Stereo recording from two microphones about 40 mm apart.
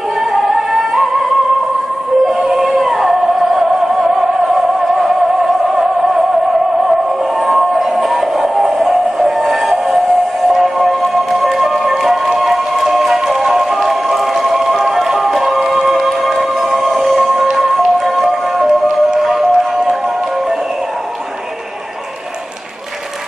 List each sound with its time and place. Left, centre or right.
0.3 s music: centre
2.2 s music: centre
7.4 s music: centre